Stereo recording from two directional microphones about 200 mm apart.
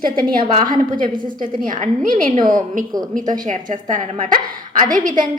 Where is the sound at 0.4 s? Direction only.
25° right (ahead or behind).